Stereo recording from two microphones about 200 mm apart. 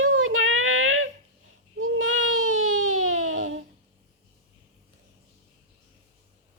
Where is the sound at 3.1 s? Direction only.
90° right.